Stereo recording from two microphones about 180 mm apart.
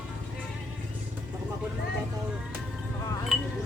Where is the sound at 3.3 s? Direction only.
Centre (ahead or behind).